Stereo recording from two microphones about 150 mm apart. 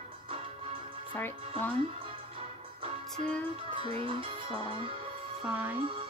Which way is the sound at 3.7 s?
35° right (ahead or behind).